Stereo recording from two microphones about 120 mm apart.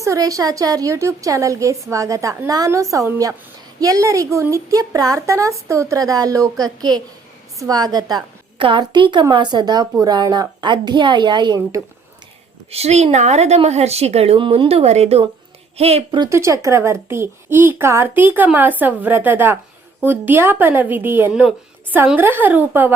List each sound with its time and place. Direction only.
0.0 s a woman's voice: 25° right (ahead or behind)
8.5 s a woman's voice: 45° right (ahead or behind)
12.7 s speech: 65° right (ahead or behind)
16.3 s a woman's voice: 25° right (ahead or behind)